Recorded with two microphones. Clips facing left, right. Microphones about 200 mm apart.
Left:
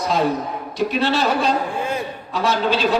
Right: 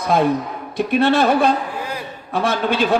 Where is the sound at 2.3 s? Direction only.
55° right (ahead or behind).